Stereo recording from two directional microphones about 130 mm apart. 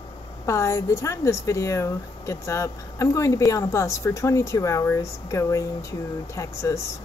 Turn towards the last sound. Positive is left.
turn(degrees=25)  # may be behind; listen again after turning